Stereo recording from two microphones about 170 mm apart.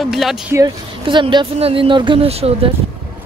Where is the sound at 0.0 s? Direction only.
Centre (ahead or behind).